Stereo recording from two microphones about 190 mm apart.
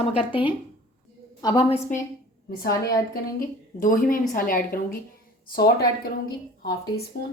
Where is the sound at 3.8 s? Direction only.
45° left (ahead or behind).